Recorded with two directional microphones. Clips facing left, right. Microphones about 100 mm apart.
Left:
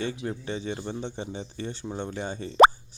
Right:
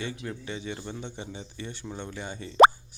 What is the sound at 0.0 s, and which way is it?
Speech, 30° left (ahead or behind).